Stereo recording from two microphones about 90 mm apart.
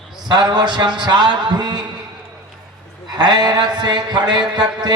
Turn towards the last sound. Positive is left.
turn(degrees=-55)  # may be behind; listen again after turning